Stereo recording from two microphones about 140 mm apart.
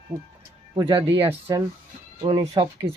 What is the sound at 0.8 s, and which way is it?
Speech, 40° right (ahead or behind).